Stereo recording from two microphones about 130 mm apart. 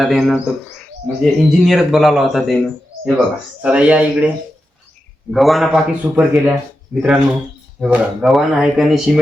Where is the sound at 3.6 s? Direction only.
10° right (ahead or behind).